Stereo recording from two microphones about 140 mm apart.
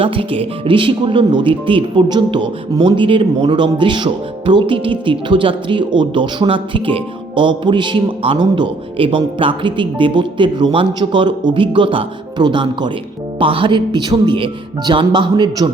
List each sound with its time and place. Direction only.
0.0 s speech: 40° right (ahead or behind)